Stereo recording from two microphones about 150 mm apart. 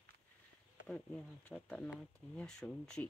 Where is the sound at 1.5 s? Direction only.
5° left (ahead or behind).